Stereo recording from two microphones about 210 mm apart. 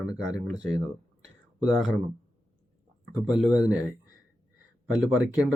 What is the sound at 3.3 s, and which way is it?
Speech, 5° right (ahead or behind).